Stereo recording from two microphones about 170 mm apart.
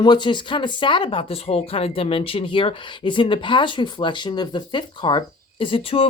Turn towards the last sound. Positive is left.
turn(degrees=35)  # may be behind; listen again after turning